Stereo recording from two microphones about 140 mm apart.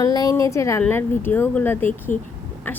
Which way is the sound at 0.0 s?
25° left (ahead or behind).